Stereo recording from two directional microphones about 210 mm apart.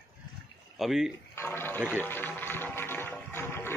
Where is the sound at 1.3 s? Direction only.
10° left (ahead or behind).